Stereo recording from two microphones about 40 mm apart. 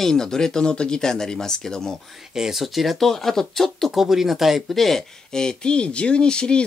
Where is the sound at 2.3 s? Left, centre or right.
Centre.